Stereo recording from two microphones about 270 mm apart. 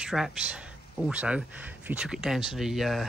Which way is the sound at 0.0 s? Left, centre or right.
Centre.